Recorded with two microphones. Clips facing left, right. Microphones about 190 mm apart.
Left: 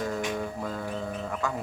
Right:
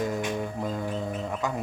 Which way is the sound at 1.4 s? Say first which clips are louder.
Right 1 dB; 20° right (ahead or behind).